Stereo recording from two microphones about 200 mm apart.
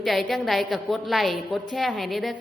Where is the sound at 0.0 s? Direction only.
Centre (ahead or behind).